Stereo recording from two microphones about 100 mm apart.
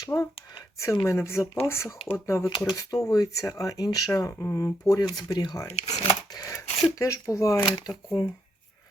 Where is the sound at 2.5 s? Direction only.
40° left (ahead or behind).